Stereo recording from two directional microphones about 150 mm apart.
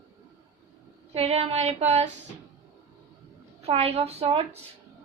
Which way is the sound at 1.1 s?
40° right (ahead or behind).